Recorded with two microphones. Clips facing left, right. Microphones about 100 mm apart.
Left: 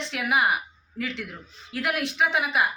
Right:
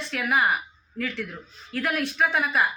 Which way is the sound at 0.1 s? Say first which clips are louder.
Right 1 dB; 15° left (ahead or behind).